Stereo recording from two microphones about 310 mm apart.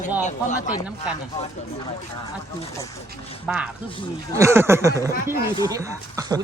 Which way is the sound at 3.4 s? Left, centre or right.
Centre.